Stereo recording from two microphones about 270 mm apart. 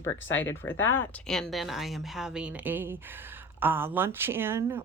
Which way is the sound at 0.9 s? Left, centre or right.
Centre.